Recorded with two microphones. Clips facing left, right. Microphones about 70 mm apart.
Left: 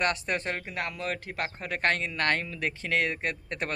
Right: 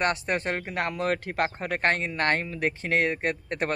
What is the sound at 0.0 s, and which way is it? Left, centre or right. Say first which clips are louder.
Speech: right 2 dB; right.